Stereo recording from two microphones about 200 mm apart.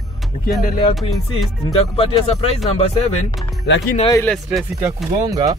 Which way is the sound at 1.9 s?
30° left (ahead or behind).